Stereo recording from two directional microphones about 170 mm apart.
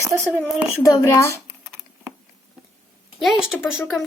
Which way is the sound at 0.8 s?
20° left (ahead or behind).